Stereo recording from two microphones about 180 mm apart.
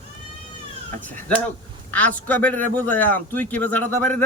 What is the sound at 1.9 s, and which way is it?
A man's voice, 10° left (ahead or behind).